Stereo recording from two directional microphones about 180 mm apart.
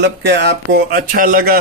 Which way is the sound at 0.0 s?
65° right (ahead or behind).